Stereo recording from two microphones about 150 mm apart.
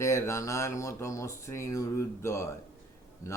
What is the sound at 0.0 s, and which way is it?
Speech, 20° left (ahead or behind).